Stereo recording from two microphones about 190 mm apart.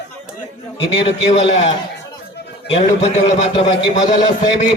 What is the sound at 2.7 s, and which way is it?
Speech, 35° left (ahead or behind).